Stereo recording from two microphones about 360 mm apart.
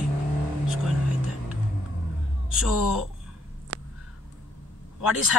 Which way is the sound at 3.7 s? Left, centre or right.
Right.